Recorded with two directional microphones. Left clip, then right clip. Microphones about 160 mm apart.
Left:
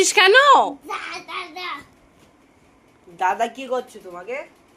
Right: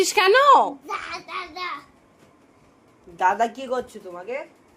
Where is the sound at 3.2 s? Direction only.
35° right (ahead or behind).